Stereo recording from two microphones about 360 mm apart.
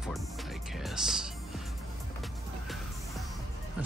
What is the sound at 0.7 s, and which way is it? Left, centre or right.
Music, centre.